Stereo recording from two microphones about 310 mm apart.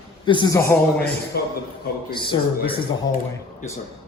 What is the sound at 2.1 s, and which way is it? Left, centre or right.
Speech, centre.